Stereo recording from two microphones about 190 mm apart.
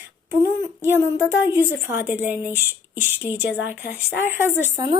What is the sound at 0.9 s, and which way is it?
A woman's voice, 10° right (ahead or behind).